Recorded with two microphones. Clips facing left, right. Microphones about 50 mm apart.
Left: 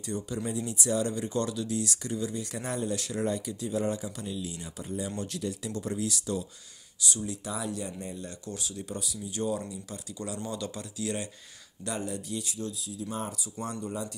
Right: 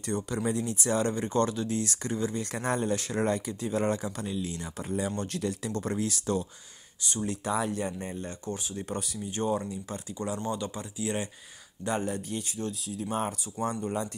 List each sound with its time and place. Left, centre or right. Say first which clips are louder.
0.0 s speech: right 3 dB; right
3.8 s speech: right 2 dB; right
8.8 s speech: right 3 dB; right
13.6 s speech: right 5 dB; centre